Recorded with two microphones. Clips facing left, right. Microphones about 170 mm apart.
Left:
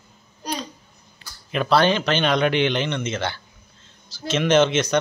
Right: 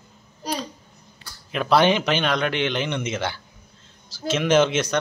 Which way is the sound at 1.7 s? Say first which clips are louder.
Right 1 dB; 15° right (ahead or behind).